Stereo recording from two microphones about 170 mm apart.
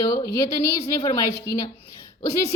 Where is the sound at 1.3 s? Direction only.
70° left (ahead or behind).